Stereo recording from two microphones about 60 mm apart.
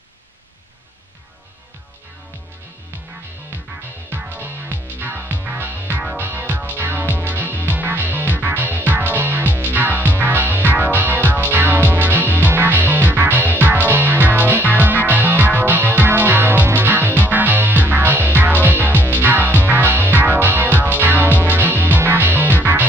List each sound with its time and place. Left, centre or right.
4.2 s music: right